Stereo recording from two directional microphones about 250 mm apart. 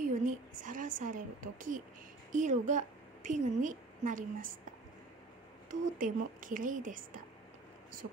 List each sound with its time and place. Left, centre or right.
0.1 s a sound: right
2.3 s a woman's voice: right
5.9 s speech: right